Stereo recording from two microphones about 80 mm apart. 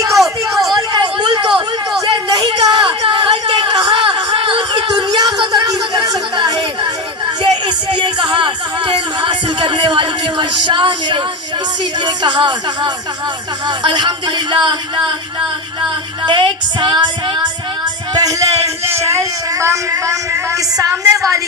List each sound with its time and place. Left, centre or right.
0.2 s a sound: centre
0.8 s hubbub: right
2.0 s a sound: right
7.5 s music: right
12.0 s speech: right
16.2 s speech: right
18.1 s speech: right
18.9 s speech: right